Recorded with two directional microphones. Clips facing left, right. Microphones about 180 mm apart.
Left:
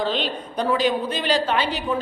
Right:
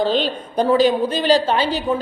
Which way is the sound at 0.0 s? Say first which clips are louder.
Right 5 dB; 35° right (ahead or behind).